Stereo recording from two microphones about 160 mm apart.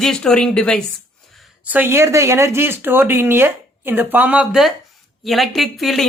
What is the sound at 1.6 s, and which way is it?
A woman's voice, 10° right (ahead or behind).